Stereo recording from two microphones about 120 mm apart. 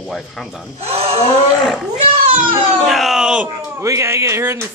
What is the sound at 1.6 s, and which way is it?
Speech, centre (ahead or behind).